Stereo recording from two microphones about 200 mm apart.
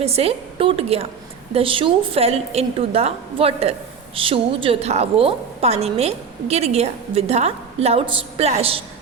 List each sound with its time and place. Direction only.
0.0 s a woman's voice: 30° right (ahead or behind)